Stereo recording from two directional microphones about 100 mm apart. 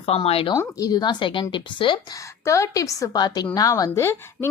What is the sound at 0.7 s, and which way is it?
A woman's voice, 40° left (ahead or behind).